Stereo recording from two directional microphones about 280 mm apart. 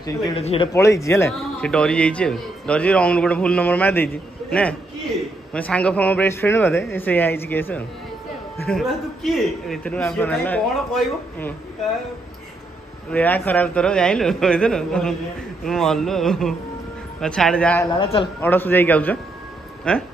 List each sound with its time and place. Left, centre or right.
0.0 s a man's voice: left; by 11.5 s centre
13.1 s a man's voice: centre
17.8 s a man's voice: centre
18.4 s a man's voice: centre